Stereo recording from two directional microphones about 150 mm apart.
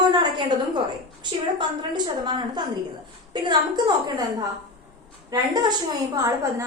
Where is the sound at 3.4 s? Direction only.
30° right (ahead or behind).